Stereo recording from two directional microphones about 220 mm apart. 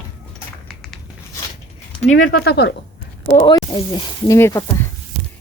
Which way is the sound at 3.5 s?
20° left (ahead or behind).